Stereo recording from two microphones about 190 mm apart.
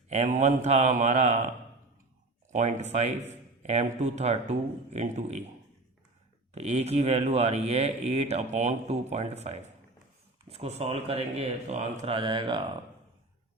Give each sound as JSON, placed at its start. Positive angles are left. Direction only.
{"t": 0.1, "sound": "a man's voice", "side_deg": -35}
{"t": 2.5, "sound": "a man's voice", "side_deg": -40}
{"t": 6.5, "sound": "a man's voice", "side_deg": -35}